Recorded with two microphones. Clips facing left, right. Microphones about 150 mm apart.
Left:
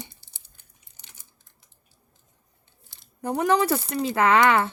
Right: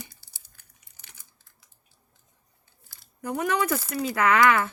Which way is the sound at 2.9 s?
25° left (ahead or behind).